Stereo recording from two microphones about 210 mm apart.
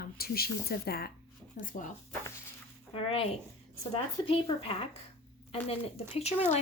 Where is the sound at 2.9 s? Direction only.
25° left (ahead or behind).